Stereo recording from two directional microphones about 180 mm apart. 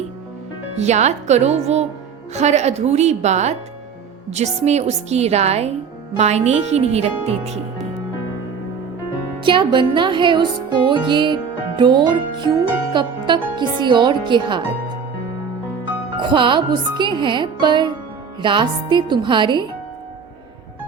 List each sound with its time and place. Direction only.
0.8 s a woman's voice: 40° right (ahead or behind)
9.4 s speech: 25° right (ahead or behind)
16.1 s speech: 25° right (ahead or behind)